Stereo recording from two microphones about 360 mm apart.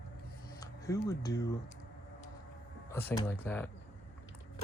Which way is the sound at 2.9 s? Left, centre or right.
Centre.